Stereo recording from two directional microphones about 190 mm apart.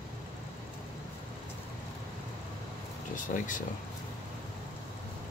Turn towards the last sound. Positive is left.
turn(degrees=45)  # may be behind; listen again after turning